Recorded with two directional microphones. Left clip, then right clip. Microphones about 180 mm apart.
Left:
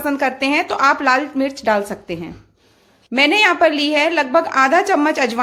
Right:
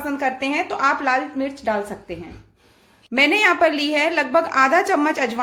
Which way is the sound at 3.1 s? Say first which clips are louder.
Left 3 dB; 20° left (ahead or behind).